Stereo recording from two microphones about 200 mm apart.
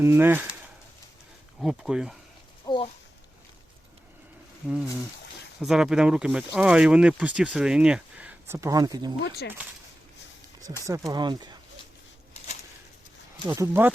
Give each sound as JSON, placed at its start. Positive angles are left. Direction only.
{"t": 0.0, "sound": "speech", "side_deg": -10}
{"t": 1.6, "sound": "speech", "side_deg": -5}
{"t": 2.6, "sound": "speech", "side_deg": 25}
{"t": 5.5, "sound": "speech", "side_deg": 0}
{"t": 9.2, "sound": "speech", "side_deg": 50}
{"t": 10.8, "sound": "speech", "side_deg": -15}
{"t": 13.5, "sound": "speech", "side_deg": -10}